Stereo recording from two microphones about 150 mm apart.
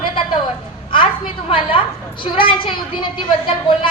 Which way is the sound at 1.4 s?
35° left (ahead or behind).